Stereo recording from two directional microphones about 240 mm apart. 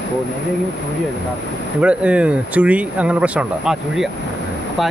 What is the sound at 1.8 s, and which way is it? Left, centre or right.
Speech, centre.